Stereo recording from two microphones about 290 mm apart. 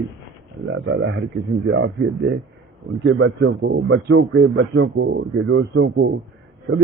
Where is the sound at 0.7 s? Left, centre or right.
Right.